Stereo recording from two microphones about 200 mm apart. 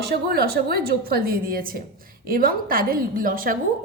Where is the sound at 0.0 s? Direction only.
55° right (ahead or behind).